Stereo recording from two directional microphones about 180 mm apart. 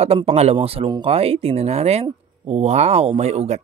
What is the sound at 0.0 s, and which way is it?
Speech, 35° right (ahead or behind).